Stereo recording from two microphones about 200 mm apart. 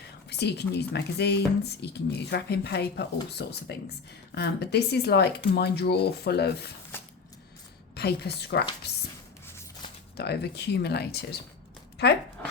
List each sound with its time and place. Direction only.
0.3 s speech: 55° left (ahead or behind)
6.9 s a sound: 10° left (ahead or behind)
7.9 s speech: 55° left (ahead or behind)
10.2 s speech: 55° left (ahead or behind)